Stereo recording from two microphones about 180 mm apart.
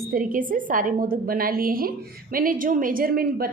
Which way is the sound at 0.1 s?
50° right (ahead or behind).